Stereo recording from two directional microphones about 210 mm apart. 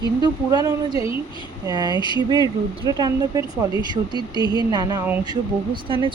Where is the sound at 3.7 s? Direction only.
20° left (ahead or behind).